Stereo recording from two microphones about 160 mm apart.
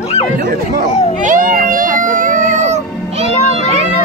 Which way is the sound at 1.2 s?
55° right (ahead or behind).